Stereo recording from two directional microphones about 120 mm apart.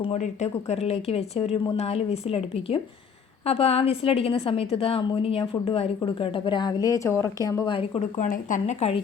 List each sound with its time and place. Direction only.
0.0 s a woman's voice: 65° left (ahead or behind); by 7.7 s 30° left (ahead or behind)
7.7 s a woman's voice: 50° left (ahead or behind)
8.2 s speech: 90° left